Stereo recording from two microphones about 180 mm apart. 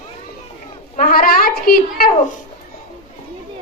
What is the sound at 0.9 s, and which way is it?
Speech, 50° left (ahead or behind).